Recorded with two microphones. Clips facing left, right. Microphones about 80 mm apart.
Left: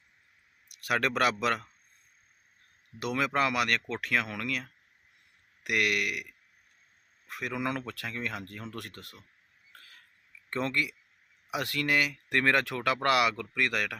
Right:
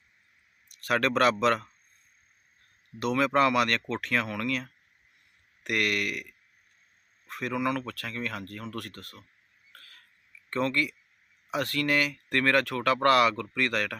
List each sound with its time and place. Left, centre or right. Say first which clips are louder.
0.7 s speech: right 3 dB; centre
3.0 s speech: right 5 dB; centre
7.3 s speech: right 4 dB; centre
7.6 s speech: right 3 dB; centre
9.7 s a sound: right 1 dB; centre
10.5 s speech: right 3 dB; centre